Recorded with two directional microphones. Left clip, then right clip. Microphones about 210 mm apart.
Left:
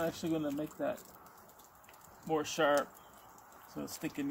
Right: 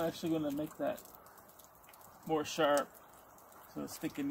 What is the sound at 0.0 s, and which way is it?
Speech, 5° left (ahead or behind).